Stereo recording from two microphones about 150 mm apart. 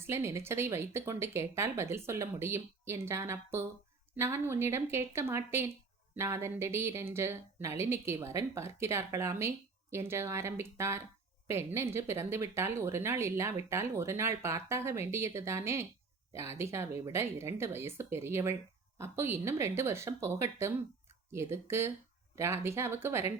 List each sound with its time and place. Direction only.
0.0 s speech: 15° right (ahead or behind)